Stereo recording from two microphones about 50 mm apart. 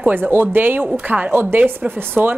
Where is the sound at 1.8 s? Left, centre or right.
Right.